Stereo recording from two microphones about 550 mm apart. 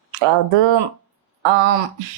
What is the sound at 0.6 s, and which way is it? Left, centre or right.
Speech, right.